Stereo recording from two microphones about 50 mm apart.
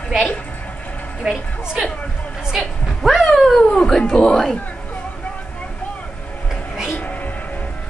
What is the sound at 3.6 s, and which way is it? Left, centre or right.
Cat, centre.